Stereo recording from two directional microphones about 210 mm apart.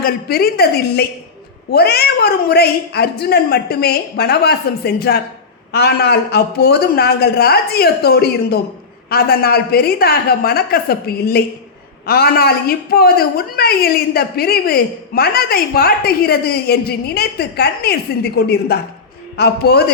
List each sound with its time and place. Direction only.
0.0 s a woman's voice: 45° left (ahead or behind)